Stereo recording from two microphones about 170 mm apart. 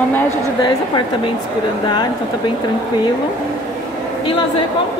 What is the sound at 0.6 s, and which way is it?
Speech, 25° left (ahead or behind).